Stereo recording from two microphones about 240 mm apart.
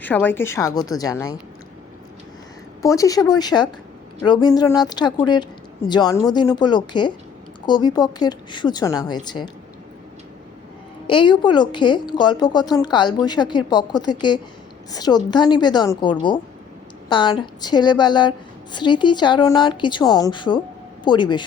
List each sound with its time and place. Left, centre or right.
0.0 s a woman's voice: centre
2.8 s a woman's voice: centre
11.0 s a woman's voice: left